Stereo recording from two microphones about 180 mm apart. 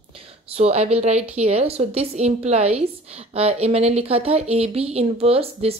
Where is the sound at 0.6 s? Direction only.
35° right (ahead or behind).